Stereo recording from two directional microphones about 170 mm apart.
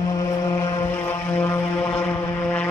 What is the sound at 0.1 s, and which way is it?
Vehicle, 20° left (ahead or behind).